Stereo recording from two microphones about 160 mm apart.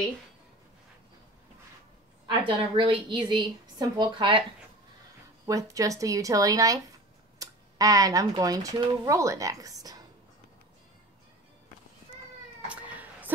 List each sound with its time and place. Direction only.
2.2 s a woman's voice: 35° right (ahead or behind)
5.5 s speech: 20° right (ahead or behind)
12.6 s cat: 10° right (ahead or behind)